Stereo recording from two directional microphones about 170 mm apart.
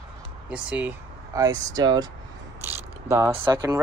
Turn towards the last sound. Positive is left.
turn(degrees=-25)  # may be behind; listen again after turning